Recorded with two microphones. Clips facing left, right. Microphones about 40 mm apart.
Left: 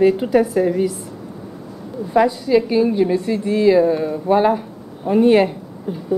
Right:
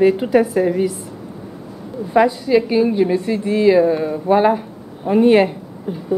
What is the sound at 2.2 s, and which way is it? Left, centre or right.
Speech, centre.